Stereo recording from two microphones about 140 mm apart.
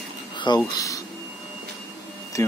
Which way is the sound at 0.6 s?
25° left (ahead or behind).